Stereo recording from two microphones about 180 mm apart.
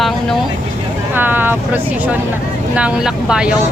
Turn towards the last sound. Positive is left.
turn(degrees=-5)  # may be behind; listen again after turning